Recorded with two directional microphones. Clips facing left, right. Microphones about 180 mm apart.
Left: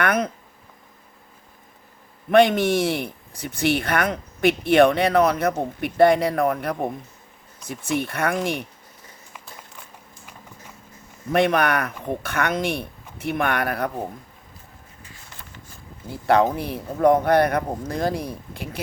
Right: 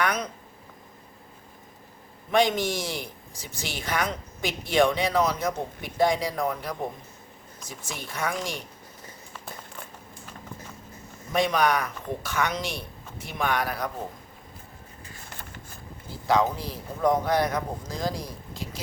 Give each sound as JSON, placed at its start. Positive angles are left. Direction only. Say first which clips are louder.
{"t": 0.0, "sound": "speech", "louder": "left 5 dB", "side_deg": 55}
{"t": 2.3, "sound": "speech", "louder": "left 7 dB", "side_deg": 60}
{"t": 11.3, "sound": "speech", "louder": "left 4 dB", "side_deg": 60}
{"t": 15.3, "sound": "vehicle", "louder": "right 2 dB", "side_deg": -45}
{"t": 16.0, "sound": "speech", "louder": "left 5 dB", "side_deg": 60}